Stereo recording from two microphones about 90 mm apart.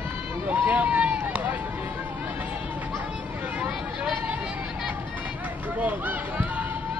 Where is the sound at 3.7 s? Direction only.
10° right (ahead or behind).